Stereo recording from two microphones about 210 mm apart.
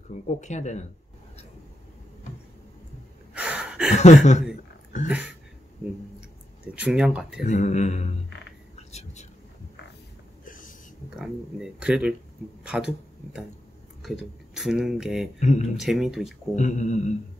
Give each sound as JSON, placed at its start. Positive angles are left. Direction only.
{"t": 0.3, "sound": "speech", "side_deg": 35}
{"t": 3.3, "sound": "a sound", "side_deg": -5}
{"t": 3.9, "sound": "speech", "side_deg": 35}
{"t": 5.0, "sound": "speech", "side_deg": -5}
{"t": 6.7, "sound": "speech", "side_deg": -5}
{"t": 7.4, "sound": "speech", "side_deg": 35}
{"t": 8.7, "sound": "whispering", "side_deg": 30}
{"t": 10.4, "sound": "a sound", "side_deg": 40}
{"t": 11.1, "sound": "speech", "side_deg": -5}
{"t": 15.4, "sound": "speech", "side_deg": 35}
{"t": 15.8, "sound": "speech", "side_deg": 0}
{"t": 16.5, "sound": "speech", "side_deg": 35}